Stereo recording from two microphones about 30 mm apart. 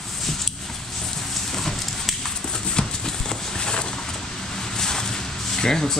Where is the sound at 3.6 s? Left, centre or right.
Left.